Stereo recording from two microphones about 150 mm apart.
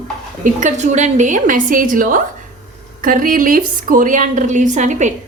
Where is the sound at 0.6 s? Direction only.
50° right (ahead or behind).